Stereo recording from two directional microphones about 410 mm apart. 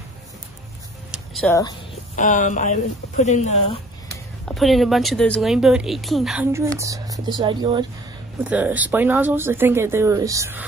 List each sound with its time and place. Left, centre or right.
1.1 s speech: centre
4.5 s speech: centre